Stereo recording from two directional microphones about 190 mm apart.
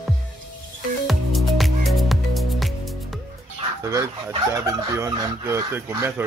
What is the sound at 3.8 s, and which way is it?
Fowl, 15° right (ahead or behind).